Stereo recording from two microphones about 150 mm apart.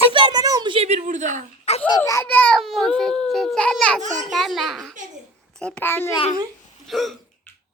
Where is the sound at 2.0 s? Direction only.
15° left (ahead or behind).